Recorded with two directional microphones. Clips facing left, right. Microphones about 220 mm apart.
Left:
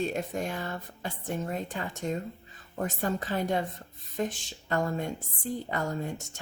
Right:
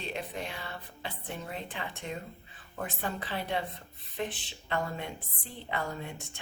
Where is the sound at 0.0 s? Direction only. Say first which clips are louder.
Left 7 dB; 45° left (ahead or behind).